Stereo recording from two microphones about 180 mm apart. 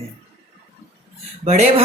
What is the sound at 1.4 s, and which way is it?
Speech, 40° right (ahead or behind).